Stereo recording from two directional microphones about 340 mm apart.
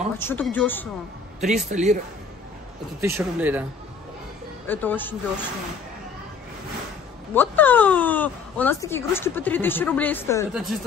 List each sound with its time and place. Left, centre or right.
0.2 s speech: centre
1.4 s a man's voice: right
3.0 s speech: centre
4.6 s speech: centre
7.3 s speech: centre